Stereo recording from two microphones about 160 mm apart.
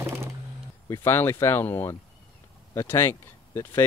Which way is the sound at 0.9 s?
15° left (ahead or behind).